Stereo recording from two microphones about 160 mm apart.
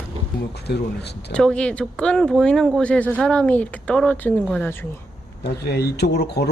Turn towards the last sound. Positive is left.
turn(degrees=90)